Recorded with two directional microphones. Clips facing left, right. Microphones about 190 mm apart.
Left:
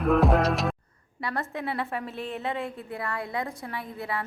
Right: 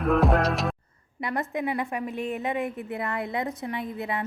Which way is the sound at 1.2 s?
20° right (ahead or behind).